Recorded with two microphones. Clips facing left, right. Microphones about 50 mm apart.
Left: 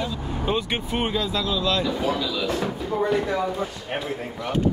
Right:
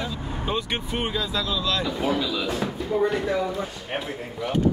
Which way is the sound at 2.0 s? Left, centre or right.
Centre.